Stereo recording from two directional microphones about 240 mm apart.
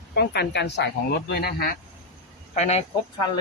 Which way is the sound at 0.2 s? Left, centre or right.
Left.